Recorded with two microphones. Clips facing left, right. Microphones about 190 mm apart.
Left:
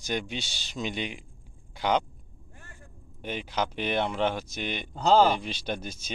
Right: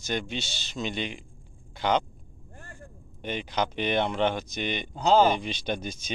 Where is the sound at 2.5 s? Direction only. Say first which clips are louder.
Right 6 dB; 50° right (ahead or behind).